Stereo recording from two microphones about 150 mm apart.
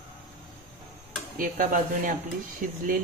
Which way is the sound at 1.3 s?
65° right (ahead or behind).